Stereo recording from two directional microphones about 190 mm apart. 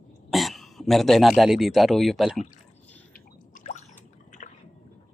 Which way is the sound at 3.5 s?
40° left (ahead or behind).